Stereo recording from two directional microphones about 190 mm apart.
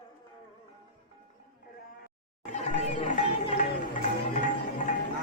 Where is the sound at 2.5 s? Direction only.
40° left (ahead or behind).